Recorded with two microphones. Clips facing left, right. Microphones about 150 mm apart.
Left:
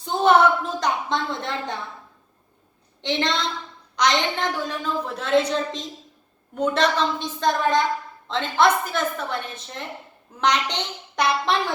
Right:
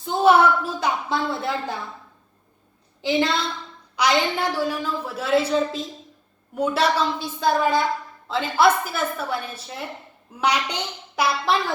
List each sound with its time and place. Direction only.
0.0 s a woman's voice: 5° right (ahead or behind)
3.0 s a woman's voice: 5° right (ahead or behind)